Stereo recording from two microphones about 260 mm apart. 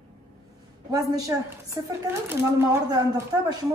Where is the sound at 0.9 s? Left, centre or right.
Centre.